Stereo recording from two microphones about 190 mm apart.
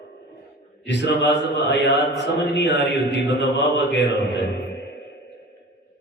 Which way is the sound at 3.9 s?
65° left (ahead or behind).